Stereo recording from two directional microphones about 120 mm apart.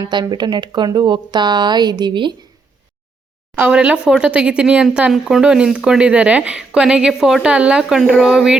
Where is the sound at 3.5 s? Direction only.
10° right (ahead or behind).